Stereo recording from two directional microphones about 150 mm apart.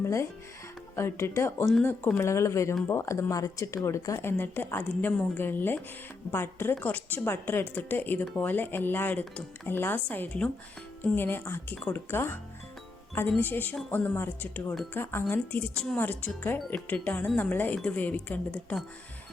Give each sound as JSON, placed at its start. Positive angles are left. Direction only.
{"t": 0.0, "sound": "a woman's voice", "side_deg": 20}